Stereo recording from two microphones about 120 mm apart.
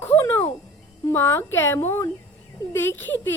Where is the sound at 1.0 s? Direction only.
20° left (ahead or behind).